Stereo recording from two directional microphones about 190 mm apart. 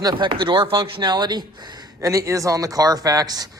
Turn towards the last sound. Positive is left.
turn(degrees=-20)  # may be behind; listen again after turning